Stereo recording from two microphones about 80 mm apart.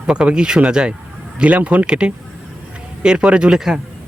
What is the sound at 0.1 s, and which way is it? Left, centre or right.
Speech, centre.